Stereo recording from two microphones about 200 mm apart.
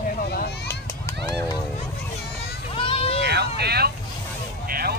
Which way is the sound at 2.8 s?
30° left (ahead or behind).